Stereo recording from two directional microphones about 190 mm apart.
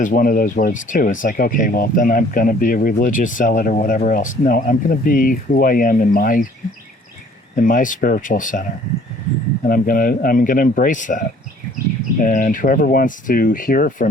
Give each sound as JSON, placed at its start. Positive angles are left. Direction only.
{"t": 0.0, "sound": "speech", "side_deg": 45}
{"t": 7.5, "sound": "speech", "side_deg": 45}
{"t": 9.6, "sound": "speech", "side_deg": 50}